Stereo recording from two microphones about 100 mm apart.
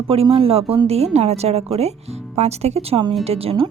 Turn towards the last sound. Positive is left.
turn(degrees=-75)  # may be behind; listen again after turning